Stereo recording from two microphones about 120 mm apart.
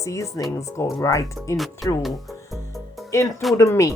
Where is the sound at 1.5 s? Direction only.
Centre (ahead or behind).